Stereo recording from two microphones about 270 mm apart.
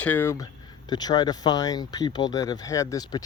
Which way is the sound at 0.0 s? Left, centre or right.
Centre.